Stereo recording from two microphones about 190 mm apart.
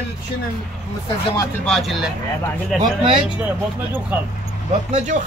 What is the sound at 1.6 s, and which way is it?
Speech, centre (ahead or behind).